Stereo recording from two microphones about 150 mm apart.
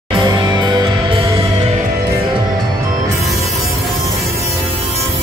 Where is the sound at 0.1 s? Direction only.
30° right (ahead or behind).